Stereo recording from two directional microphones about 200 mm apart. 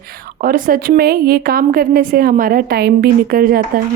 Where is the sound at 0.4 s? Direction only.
45° right (ahead or behind).